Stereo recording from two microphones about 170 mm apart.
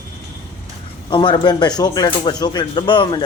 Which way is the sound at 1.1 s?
25° left (ahead or behind).